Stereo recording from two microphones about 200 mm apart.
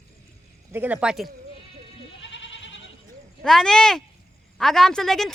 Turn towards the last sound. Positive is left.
turn(degrees=0)  # may be behind; listen again after turning